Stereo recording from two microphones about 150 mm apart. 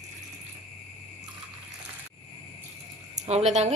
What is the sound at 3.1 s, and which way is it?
Speech, 50° right (ahead or behind).